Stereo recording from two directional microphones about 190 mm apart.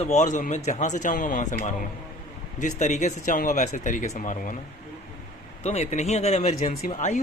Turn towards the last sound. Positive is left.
turn(degrees=40)  # may be behind; listen again after turning